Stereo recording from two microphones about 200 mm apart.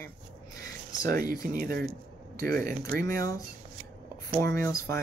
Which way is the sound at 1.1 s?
45° right (ahead or behind).